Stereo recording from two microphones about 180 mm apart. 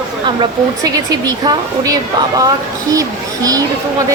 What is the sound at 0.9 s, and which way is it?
A woman's voice, 20° right (ahead or behind).